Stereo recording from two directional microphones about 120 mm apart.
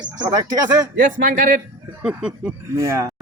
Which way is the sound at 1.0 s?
90° right.